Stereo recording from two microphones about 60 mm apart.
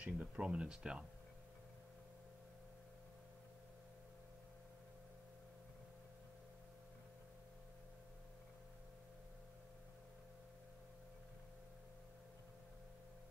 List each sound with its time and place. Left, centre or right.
0.0 s speech: centre